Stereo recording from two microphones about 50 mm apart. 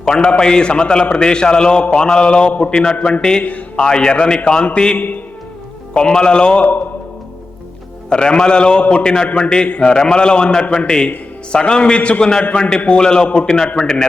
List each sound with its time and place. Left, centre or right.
0.0 s a man's voice: centre
3.4 s a man's voice: left
3.8 s a man's voice: centre
8.1 s a man's voice: centre